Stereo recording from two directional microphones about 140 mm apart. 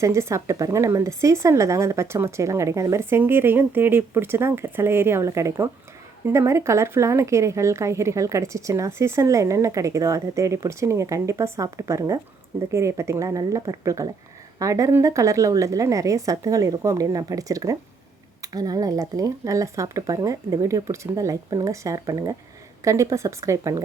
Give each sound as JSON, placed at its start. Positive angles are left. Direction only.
{"t": 0.0, "sound": "speech", "side_deg": -20}